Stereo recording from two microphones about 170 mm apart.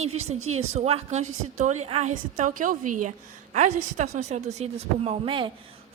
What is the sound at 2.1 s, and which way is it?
A woman's voice, 50° right (ahead or behind).